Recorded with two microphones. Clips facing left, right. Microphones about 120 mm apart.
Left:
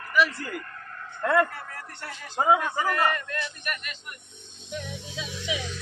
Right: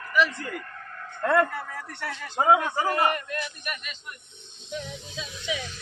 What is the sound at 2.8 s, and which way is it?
Speech, 20° right (ahead or behind).